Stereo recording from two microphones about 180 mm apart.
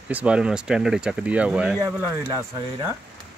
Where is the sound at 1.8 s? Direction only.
20° right (ahead or behind).